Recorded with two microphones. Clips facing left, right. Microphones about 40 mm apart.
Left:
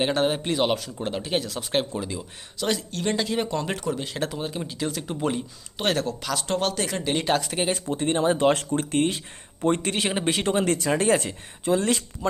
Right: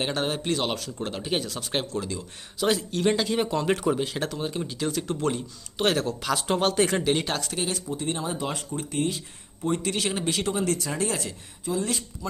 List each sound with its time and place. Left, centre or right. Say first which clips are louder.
0.0 s speech: left 4 dB; centre
2.6 s speech: right 2 dB; centre
5.7 s speech: right 1 dB; centre
7.0 s speech: right 1 dB; centre
7.3 s speech: left 6 dB; centre
7.5 s speech: left 4 dB; left
7.9 s speech: left 7 dB; left
10.5 s speech: left 5 dB; left
11.6 s speech: left 5 dB; left